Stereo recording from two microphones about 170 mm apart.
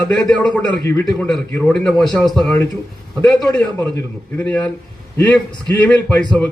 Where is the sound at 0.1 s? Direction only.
5° left (ahead or behind).